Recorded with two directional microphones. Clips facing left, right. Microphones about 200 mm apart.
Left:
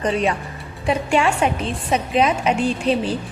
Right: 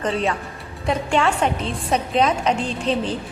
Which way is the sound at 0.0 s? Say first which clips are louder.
Left 2 dB; 15° left (ahead or behind).